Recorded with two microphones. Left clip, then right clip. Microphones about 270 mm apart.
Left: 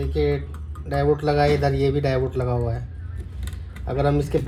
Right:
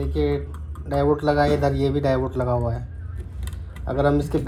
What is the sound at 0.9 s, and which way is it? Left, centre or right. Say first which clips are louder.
Speech: right 1 dB; centre.